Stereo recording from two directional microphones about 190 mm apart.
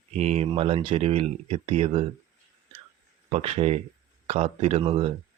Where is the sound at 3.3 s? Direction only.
35° right (ahead or behind).